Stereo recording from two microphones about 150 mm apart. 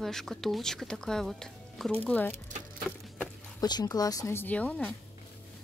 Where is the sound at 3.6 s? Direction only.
25° left (ahead or behind); by 4.9 s 10° left (ahead or behind).